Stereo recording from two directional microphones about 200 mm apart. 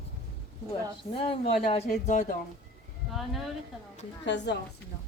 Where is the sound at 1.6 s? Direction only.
40° left (ahead or behind).